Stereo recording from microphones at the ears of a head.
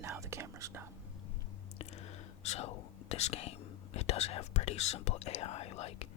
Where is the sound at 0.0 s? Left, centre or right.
Right.